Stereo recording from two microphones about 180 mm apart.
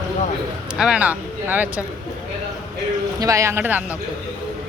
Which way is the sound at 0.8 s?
5° right (ahead or behind).